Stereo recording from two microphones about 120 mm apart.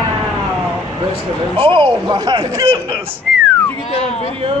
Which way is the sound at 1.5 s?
45° right (ahead or behind).